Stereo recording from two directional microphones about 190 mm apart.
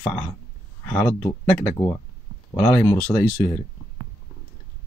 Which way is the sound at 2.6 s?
15° left (ahead or behind).